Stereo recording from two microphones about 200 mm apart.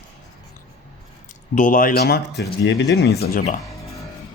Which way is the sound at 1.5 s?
40° left (ahead or behind).